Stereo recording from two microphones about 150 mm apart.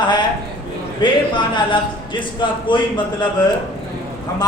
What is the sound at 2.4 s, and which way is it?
Speech, 30° left (ahead or behind).